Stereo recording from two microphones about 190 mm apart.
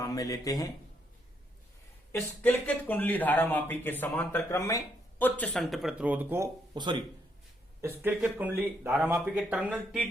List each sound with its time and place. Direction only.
0.0 s speech: 20° left (ahead or behind)
2.1 s speech: 10° left (ahead or behind); by 6.5 s 10° right (ahead or behind)
6.7 s speech: 25° right (ahead or behind)
7.8 s speech: 10° right (ahead or behind)